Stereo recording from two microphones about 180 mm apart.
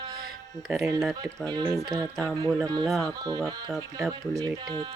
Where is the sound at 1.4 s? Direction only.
20° right (ahead or behind).